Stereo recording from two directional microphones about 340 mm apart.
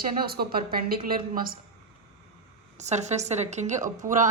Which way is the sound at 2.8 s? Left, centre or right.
Centre.